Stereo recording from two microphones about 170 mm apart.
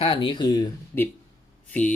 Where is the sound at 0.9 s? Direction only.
15° left (ahead or behind).